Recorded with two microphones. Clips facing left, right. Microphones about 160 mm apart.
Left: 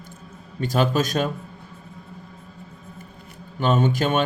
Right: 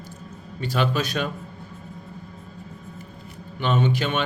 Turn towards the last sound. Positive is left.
turn(degrees=45)  # may be behind; listen again after turning